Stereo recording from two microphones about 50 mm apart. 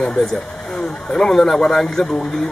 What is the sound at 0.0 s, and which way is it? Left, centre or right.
Speech, centre.